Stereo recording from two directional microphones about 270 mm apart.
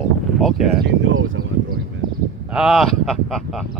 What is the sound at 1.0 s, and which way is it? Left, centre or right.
Speech, right.